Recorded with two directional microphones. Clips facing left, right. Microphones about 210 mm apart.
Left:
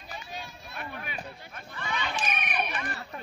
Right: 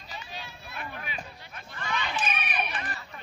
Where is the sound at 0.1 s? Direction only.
50° left (ahead or behind).